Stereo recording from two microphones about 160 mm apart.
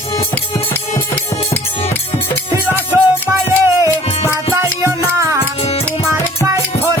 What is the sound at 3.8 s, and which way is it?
Music, 15° right (ahead or behind).